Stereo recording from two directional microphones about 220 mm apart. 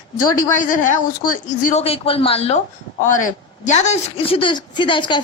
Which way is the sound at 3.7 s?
30° left (ahead or behind).